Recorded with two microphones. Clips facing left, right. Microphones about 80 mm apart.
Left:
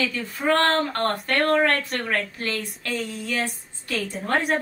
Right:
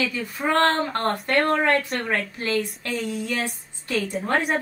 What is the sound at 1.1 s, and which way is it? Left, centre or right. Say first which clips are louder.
Speech: right 3 dB; centre.